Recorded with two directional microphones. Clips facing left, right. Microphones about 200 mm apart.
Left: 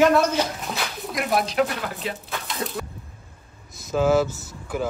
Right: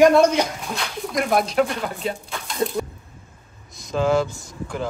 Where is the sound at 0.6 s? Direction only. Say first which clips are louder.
Right 2 dB; 5° left (ahead or behind).